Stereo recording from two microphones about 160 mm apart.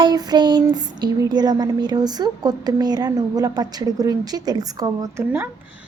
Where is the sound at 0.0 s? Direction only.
25° right (ahead or behind).